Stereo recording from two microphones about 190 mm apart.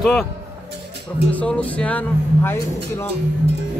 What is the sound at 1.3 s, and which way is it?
Speech, 5° left (ahead or behind).